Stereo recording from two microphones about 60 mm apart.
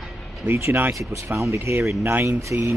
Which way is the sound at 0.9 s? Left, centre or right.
Right.